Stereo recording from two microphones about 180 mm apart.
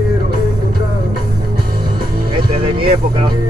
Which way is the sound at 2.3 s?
30° right (ahead or behind).